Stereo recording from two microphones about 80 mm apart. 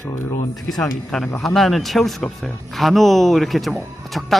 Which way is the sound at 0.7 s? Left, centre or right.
Centre.